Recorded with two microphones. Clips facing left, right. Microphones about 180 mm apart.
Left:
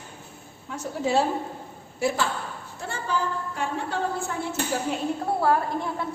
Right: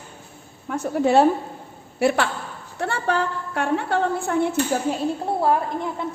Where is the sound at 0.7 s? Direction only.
60° right (ahead or behind).